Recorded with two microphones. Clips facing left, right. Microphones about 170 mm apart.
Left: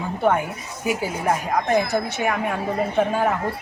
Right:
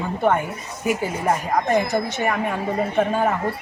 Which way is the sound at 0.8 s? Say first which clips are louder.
Right 1 dB; centre (ahead or behind).